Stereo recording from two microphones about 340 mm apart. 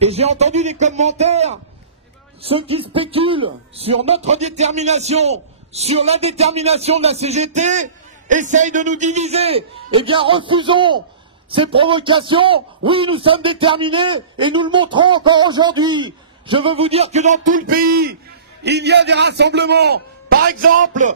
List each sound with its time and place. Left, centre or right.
0.0 s a man's voice: centre